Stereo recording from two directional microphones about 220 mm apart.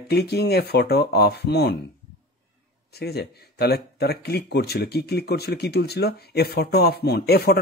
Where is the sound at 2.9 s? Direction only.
45° left (ahead or behind).